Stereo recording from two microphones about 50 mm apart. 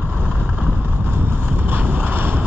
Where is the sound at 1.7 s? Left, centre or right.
Right.